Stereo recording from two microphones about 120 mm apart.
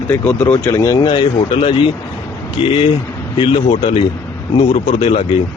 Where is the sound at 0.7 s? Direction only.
30° left (ahead or behind).